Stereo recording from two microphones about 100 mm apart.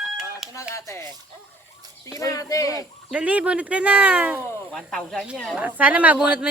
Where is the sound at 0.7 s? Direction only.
30° left (ahead or behind).